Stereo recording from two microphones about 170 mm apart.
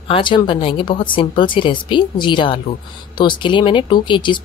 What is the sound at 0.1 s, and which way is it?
A woman's voice, 30° left (ahead or behind).